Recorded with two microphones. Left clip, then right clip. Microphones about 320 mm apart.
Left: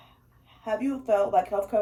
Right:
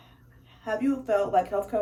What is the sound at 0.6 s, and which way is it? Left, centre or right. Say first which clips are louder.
Speech: left 1 dB; centre.